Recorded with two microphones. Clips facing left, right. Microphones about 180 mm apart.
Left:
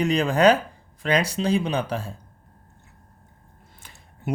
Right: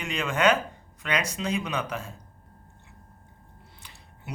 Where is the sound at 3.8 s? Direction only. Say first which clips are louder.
Left 14 dB; 45° left (ahead or behind).